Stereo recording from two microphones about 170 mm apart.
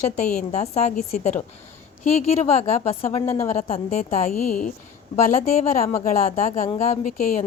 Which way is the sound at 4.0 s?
55° left (ahead or behind).